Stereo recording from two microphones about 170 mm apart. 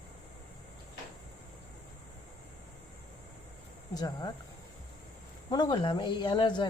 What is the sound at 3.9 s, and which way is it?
Speech, 25° left (ahead or behind).